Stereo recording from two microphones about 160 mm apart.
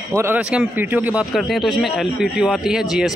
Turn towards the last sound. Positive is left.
turn(degrees=-5)  # may be behind; listen again after turning